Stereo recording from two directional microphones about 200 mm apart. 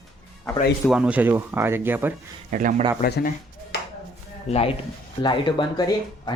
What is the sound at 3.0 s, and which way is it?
Speech, 50° left (ahead or behind).